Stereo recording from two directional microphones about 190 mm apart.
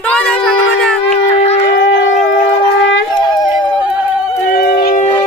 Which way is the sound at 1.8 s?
80° left.